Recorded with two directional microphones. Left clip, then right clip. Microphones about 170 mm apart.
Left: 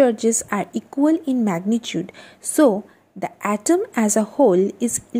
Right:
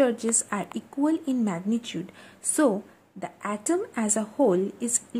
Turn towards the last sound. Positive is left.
turn(degrees=25)  # may be behind; listen again after turning